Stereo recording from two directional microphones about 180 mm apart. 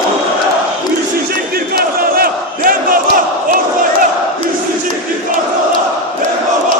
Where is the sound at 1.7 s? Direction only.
55° right (ahead or behind).